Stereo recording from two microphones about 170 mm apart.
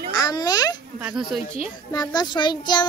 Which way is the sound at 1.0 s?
5° right (ahead or behind).